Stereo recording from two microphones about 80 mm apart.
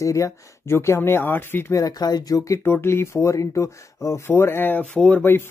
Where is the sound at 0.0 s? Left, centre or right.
Left.